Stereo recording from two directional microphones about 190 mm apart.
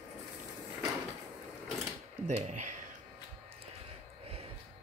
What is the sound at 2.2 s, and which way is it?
Speech, 40° right (ahead or behind).